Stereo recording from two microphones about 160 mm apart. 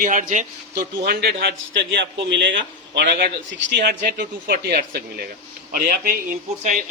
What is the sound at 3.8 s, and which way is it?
A man's voice, 70° right (ahead or behind).